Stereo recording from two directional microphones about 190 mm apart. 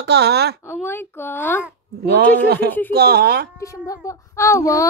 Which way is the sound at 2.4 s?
55° right (ahead or behind).